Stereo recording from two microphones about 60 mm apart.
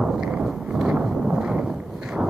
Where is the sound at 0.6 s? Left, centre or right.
Centre.